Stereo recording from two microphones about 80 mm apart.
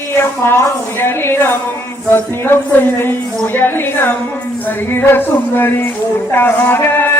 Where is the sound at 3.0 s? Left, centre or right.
Left.